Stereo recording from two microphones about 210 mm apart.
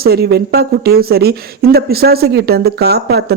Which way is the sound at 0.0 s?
50° right (ahead or behind).